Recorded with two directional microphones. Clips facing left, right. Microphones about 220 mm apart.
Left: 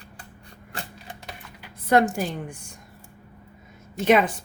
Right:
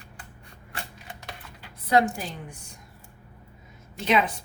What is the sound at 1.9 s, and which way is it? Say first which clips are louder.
Speech: left 3 dB; 50° left (ahead or behind).